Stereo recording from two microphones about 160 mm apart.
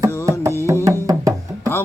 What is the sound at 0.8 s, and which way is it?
Music, 20° right (ahead or behind).